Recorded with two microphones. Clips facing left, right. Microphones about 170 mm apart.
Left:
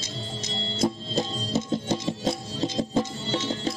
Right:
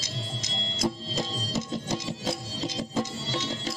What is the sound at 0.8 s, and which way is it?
Music, 35° left (ahead or behind).